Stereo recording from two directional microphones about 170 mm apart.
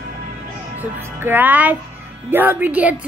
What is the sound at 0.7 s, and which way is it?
A woman's voice, 10° right (ahead or behind).